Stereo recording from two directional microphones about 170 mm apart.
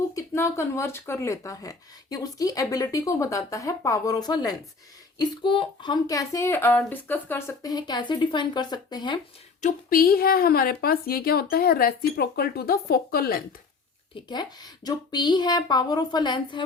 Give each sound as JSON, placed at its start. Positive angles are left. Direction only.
{"t": 0.1, "sound": "speech", "side_deg": 20}
{"t": 9.6, "sound": "a woman's voice", "side_deg": 50}
{"t": 14.3, "sound": "speech", "side_deg": 25}